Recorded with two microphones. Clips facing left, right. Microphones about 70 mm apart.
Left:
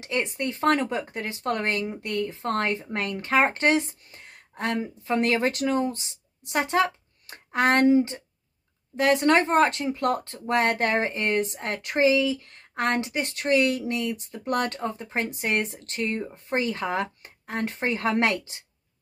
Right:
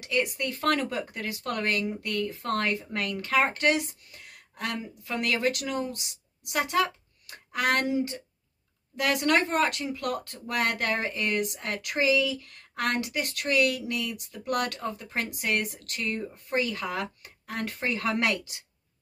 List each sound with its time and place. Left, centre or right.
0.0 s speech: left